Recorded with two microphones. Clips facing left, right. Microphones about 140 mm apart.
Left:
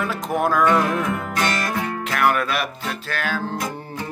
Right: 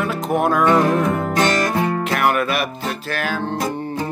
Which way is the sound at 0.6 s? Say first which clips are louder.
Right 4 dB; 30° right (ahead or behind).